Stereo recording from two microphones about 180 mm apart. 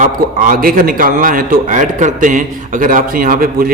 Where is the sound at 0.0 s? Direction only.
50° right (ahead or behind).